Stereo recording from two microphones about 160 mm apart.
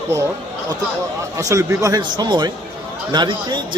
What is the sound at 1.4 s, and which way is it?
Speech, 20° right (ahead or behind).